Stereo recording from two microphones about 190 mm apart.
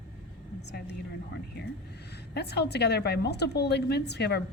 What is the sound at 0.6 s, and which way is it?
Speech, 60° left (ahead or behind).